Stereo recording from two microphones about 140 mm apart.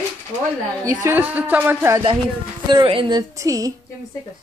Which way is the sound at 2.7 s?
35° right (ahead or behind).